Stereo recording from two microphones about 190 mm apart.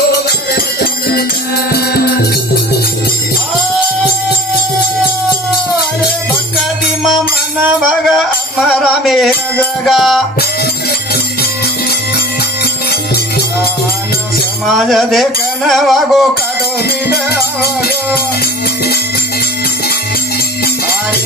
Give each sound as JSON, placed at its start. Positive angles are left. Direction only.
{"t": 0.1, "sound": "music", "side_deg": 55}
{"t": 7.6, "sound": "music", "side_deg": -5}
{"t": 14.7, "sound": "music", "side_deg": 0}
{"t": 17.1, "sound": "music", "side_deg": 55}